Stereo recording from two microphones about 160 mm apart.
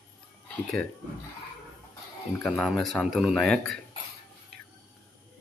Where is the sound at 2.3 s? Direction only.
10° left (ahead or behind).